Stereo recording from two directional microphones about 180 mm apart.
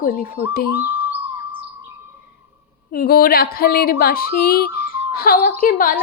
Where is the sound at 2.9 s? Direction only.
55° left (ahead or behind).